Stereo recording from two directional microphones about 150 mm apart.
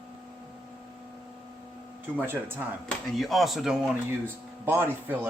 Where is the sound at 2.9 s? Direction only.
Centre (ahead or behind).